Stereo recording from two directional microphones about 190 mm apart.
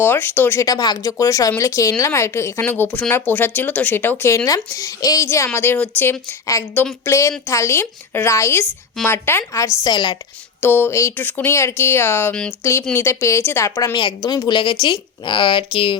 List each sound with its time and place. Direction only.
0.0 s speech: 10° left (ahead or behind)
10.6 s a woman's voice: 10° left (ahead or behind)